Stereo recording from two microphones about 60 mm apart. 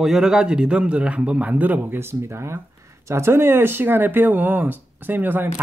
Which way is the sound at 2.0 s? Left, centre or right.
Right.